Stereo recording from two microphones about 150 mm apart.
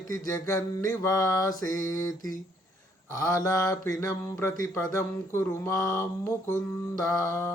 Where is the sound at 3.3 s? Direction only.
25° left (ahead or behind).